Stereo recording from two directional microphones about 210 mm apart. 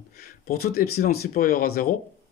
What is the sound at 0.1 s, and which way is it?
Speech, 45° left (ahead or behind).